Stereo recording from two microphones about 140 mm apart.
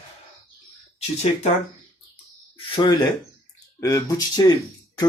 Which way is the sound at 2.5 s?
35° left (ahead or behind).